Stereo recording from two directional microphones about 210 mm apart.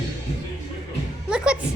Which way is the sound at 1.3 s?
5° right (ahead or behind).